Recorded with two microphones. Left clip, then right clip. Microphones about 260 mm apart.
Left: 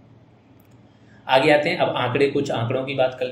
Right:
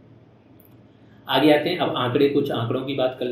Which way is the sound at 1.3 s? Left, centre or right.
Left.